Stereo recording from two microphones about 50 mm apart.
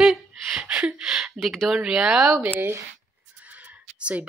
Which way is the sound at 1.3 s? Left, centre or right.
Centre.